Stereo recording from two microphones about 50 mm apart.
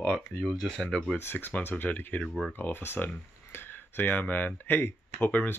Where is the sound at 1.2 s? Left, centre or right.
Left.